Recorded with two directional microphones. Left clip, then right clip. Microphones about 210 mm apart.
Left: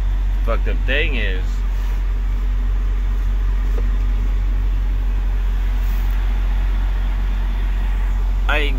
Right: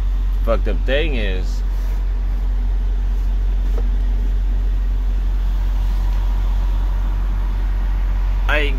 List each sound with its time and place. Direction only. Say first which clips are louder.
0.5 s speech: right 3 dB; 40° right (ahead or behind)
8.5 s speech: right 1 dB; 5° right (ahead or behind)